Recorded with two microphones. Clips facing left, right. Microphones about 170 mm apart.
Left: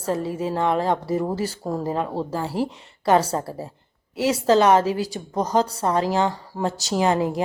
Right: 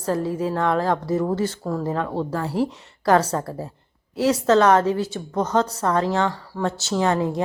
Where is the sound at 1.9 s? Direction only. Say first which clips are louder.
Even; 10° left (ahead or behind).